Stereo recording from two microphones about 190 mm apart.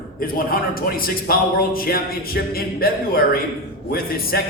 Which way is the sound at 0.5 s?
50° left (ahead or behind).